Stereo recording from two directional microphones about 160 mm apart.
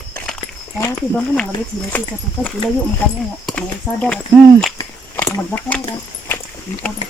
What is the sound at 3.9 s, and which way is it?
Speech, centre (ahead or behind).